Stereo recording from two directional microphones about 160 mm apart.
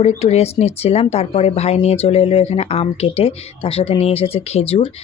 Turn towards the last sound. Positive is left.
turn(degrees=35)  # may be behind; listen again after turning